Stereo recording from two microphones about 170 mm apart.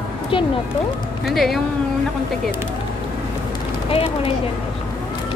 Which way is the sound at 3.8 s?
35° left (ahead or behind).